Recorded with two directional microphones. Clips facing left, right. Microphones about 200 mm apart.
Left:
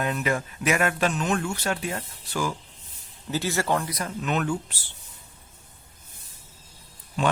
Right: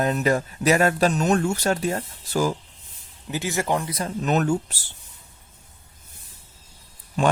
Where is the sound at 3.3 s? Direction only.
15° right (ahead or behind); by 4.7 s 40° right (ahead or behind).